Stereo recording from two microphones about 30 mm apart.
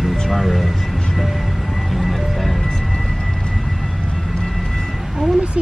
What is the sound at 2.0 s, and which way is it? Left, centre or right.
Music, centre.